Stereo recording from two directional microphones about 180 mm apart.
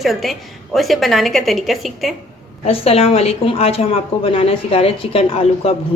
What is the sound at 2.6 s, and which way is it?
A woman's voice, 35° left (ahead or behind).